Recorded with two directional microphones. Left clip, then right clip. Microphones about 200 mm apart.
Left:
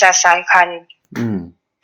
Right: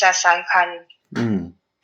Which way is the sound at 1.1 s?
60° left (ahead or behind).